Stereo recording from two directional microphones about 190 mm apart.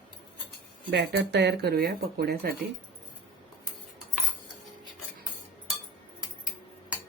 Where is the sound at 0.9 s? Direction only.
65° right (ahead or behind).